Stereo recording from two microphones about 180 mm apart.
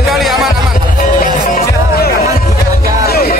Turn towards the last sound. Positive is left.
turn(degrees=55)  # may be behind; listen again after turning